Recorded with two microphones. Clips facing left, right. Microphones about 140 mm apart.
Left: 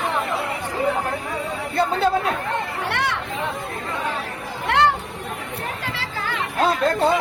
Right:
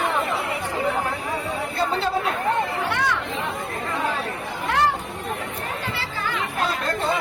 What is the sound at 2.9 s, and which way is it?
Chatter, 65° left (ahead or behind).